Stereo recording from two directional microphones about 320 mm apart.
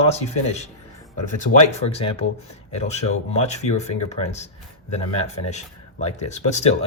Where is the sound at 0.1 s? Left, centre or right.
Centre.